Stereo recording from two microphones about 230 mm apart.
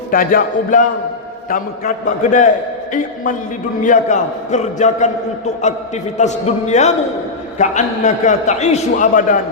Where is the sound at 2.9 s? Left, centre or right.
Left.